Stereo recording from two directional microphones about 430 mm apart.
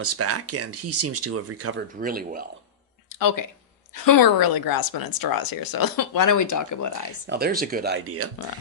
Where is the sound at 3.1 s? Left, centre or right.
Left.